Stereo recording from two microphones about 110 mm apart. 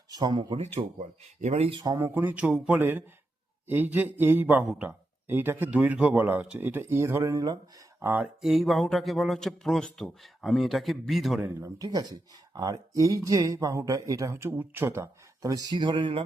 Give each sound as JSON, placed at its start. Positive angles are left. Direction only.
{"t": 0.1, "sound": "speech", "side_deg": -40}
{"t": 0.5, "sound": "speech", "side_deg": -70}
{"t": 1.9, "sound": "speech", "side_deg": -25}
{"t": 7.9, "sound": "speech", "side_deg": -15}
{"t": 8.4, "sound": "a man's voice", "side_deg": 0}
{"t": 11.4, "sound": "speech", "side_deg": -30}